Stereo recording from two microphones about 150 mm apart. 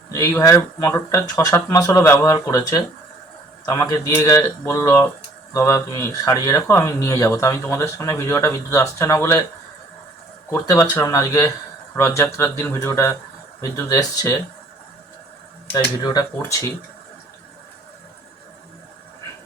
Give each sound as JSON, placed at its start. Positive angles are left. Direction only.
{"t": 0.1, "sound": "speech", "side_deg": 20}
{"t": 10.5, "sound": "speech", "side_deg": 15}
{"t": 16.0, "sound": "speech", "side_deg": 25}